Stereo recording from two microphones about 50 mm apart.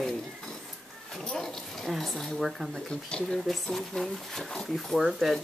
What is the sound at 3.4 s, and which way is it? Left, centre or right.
Speech, centre.